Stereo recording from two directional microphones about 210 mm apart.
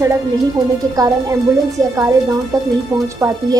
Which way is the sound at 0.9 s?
15° right (ahead or behind).